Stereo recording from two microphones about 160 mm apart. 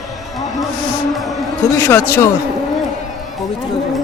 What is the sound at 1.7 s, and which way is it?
Speech, 15° left (ahead or behind).